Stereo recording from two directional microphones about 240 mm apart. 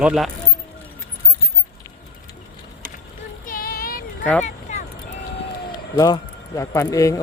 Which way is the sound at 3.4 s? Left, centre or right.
Left.